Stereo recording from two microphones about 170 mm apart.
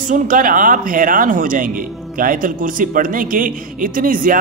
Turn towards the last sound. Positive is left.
turn(degrees=-55)  # may be behind; listen again after turning